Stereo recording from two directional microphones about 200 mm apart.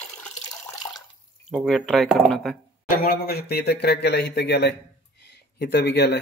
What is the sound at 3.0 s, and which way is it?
Speech, 50° left (ahead or behind).